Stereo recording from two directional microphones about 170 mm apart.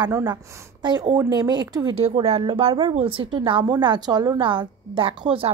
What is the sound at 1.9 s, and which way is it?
Speech, 35° right (ahead or behind).